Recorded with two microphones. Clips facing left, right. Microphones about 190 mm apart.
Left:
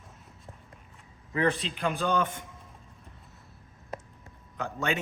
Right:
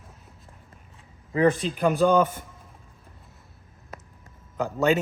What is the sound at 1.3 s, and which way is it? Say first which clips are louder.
Speech: right 6 dB; 45° right (ahead or behind).